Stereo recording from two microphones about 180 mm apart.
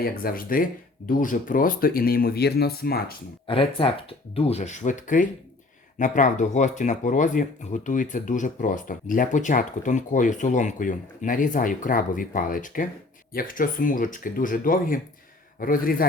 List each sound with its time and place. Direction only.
0.0 s speech: 55° left (ahead or behind)
3.4 s speech: 30° left (ahead or behind); by 16.0 s 50° left (ahead or behind)